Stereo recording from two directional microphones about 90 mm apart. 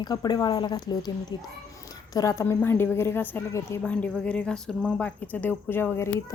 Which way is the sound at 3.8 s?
15° left (ahead or behind).